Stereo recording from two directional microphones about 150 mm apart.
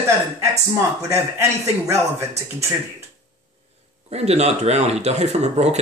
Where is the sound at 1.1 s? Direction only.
20° right (ahead or behind).